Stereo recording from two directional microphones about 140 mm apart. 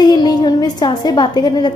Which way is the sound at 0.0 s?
30° left (ahead or behind).